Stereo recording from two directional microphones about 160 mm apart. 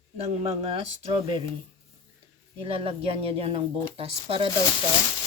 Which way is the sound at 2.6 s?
35° right (ahead or behind).